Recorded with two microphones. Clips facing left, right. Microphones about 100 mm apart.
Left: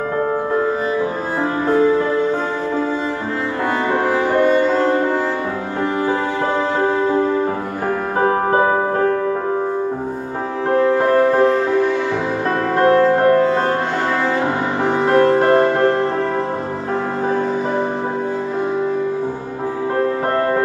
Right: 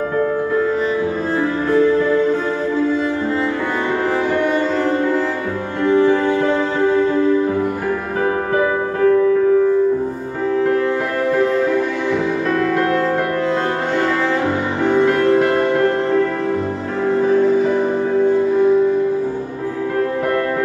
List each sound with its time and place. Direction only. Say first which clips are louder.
1.7 s music: even; 40° left (ahead or behind)
8.2 s music: left 3 dB; 35° left (ahead or behind)
10.7 s music: left 4 dB; 35° left (ahead or behind)
12.7 s music: left 4 dB; 35° left (ahead or behind)
14.9 s music: even; 40° left (ahead or behind)